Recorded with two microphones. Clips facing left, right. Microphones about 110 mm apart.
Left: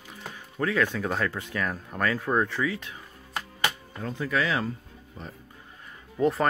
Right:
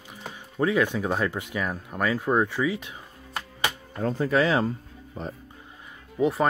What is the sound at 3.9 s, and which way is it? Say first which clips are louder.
Speech: right 6 dB; 40° right (ahead or behind).